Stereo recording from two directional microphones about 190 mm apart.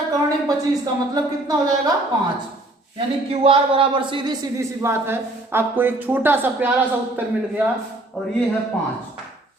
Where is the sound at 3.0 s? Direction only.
30° right (ahead or behind); by 8.3 s centre (ahead or behind).